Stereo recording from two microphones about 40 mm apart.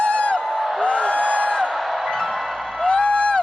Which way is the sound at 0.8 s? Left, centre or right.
Left.